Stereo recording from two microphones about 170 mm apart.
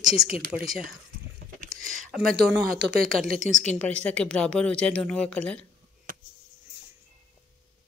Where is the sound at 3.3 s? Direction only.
50° right (ahead or behind).